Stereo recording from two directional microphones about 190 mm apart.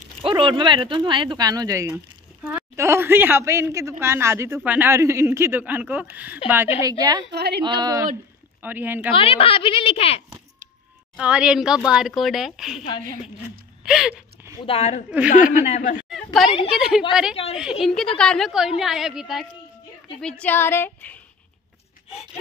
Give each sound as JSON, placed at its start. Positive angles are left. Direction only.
{"t": 0.2, "sound": "speech", "side_deg": -25}
{"t": 6.8, "sound": "speech", "side_deg": -20}
{"t": 7.2, "sound": "a woman's voice", "side_deg": -60}
{"t": 7.6, "sound": "speech", "side_deg": -20}
{"t": 9.1, "sound": "a woman's voice", "side_deg": 30}
{"t": 11.1, "sound": "speech", "side_deg": -5}
{"t": 13.8, "sound": "speech", "side_deg": -5}
{"t": 14.6, "sound": "a woman's voice", "side_deg": 35}
{"t": 16.4, "sound": "a woman's voice", "side_deg": 30}
{"t": 16.7, "sound": "speech", "side_deg": -5}